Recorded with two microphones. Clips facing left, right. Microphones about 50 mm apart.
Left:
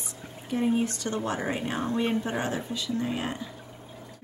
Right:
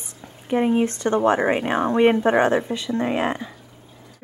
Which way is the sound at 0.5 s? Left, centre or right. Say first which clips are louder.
Right 7 dB; right.